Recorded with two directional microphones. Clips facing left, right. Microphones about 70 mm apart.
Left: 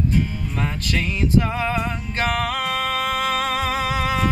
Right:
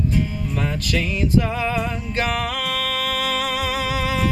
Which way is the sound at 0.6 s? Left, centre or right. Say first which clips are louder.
Right 1 dB; left.